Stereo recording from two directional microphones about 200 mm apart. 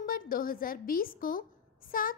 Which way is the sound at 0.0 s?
45° left (ahead or behind).